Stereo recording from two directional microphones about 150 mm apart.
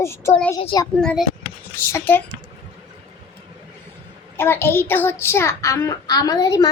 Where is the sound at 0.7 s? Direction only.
30° left (ahead or behind).